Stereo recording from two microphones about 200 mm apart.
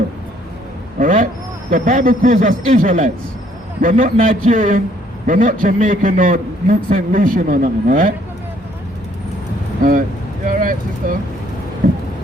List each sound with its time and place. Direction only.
0.9 s vehicle: 40° right (ahead or behind)
1.7 s a man's voice: 40° right (ahead or behind)
10.4 s vehicle: 40° right (ahead or behind)
11.8 s a sound: 40° right (ahead or behind)